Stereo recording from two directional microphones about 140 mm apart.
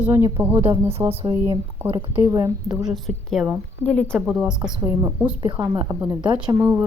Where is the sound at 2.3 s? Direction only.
25° right (ahead or behind).